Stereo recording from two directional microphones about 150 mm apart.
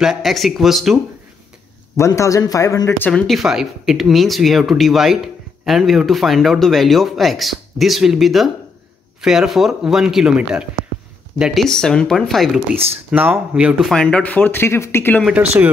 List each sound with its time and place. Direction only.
0.0 s speech: centre (ahead or behind)
2.0 s a man's voice: 20° left (ahead or behind)
3.1 s speech: 5° left (ahead or behind)
13.1 s speech: 10° right (ahead or behind); by 15.2 s 15° left (ahead or behind)
15.2 s speech: 10° right (ahead or behind)